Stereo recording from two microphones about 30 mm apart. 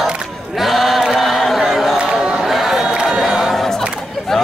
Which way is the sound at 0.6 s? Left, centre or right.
Centre.